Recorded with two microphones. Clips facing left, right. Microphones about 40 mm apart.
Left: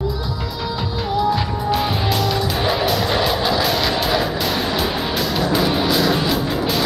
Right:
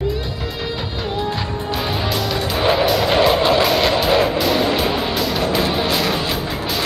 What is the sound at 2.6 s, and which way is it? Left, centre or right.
Music, centre.